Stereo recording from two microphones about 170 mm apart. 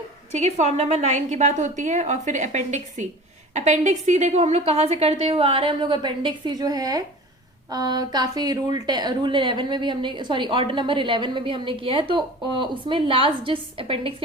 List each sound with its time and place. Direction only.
0.3 s a woman's voice: 40° right (ahead or behind)